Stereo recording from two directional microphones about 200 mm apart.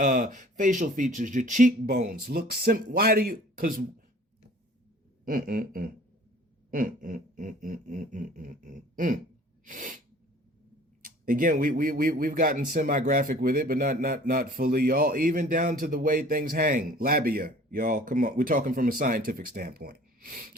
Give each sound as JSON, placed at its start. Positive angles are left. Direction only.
{"t": 0.0, "sound": "speech", "side_deg": -40}
{"t": 5.2, "sound": "speech", "side_deg": -45}
{"t": 11.0, "sound": "speech", "side_deg": -45}